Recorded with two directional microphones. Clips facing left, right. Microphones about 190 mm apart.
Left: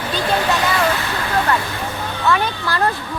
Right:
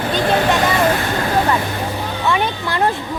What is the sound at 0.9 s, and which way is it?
Speech, 45° right (ahead or behind).